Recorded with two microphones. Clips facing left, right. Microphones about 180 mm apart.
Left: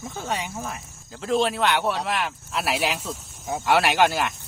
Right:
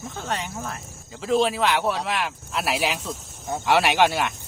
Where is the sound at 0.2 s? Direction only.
10° left (ahead or behind).